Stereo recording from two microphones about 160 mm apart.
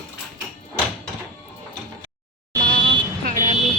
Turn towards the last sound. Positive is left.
turn(degrees=-60)  # may be behind; listen again after turning